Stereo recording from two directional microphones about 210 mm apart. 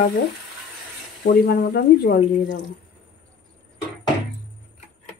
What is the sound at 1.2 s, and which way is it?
Speech, 50° left (ahead or behind).